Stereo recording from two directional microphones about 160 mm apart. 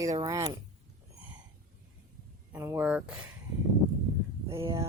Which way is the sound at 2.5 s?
15° right (ahead or behind).